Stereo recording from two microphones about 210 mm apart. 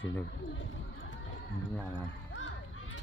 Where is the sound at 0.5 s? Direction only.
60° left (ahead or behind).